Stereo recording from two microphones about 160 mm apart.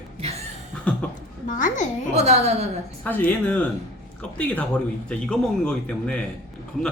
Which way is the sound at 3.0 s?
10° left (ahead or behind).